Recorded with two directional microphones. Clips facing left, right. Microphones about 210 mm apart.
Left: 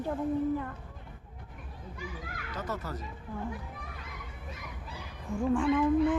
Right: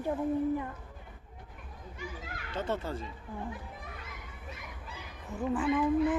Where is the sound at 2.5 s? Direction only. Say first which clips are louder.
Right 4 dB; 25° right (ahead or behind).